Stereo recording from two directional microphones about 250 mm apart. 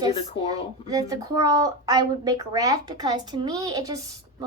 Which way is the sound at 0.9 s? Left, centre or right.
Centre.